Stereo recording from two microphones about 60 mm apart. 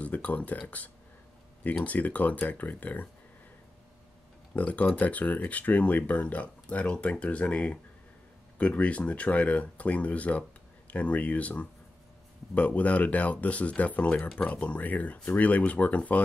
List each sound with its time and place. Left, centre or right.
0.0 s speech: left
4.6 s speech: left